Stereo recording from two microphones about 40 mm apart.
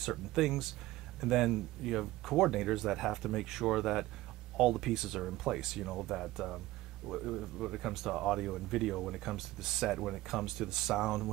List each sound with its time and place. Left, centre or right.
0.0 s speech: centre